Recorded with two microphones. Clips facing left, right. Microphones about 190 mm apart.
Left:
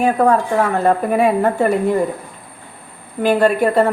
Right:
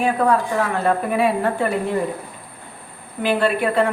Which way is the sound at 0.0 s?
45° left (ahead or behind).